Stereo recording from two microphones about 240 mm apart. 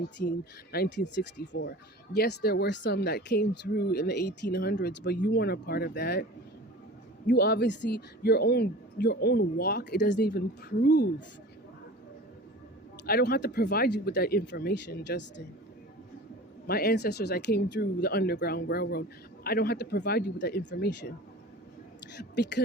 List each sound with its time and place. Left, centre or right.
0.2 s speech: left
7.3 s speech: left
13.1 s speech: left
16.6 s speech: left
22.2 s speech: left